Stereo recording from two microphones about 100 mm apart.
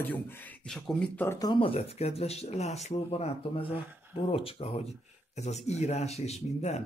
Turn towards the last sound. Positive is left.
turn(degrees=90)